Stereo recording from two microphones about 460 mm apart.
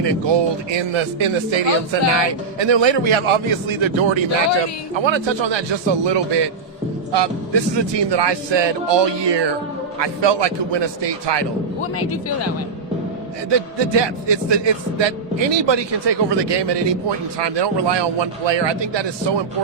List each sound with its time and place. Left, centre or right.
0.0 s speech: right
11.8 s a man's voice: left
13.5 s speech: right